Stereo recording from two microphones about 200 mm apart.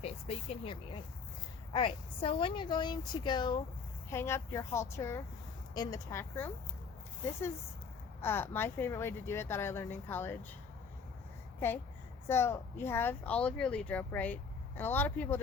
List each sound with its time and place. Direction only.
0.0 s a woman's voice: 30° left (ahead or behind); by 6.5 s 10° left (ahead or behind)
8.2 s speech: 10° left (ahead or behind)
12.3 s speech: 10° left (ahead or behind)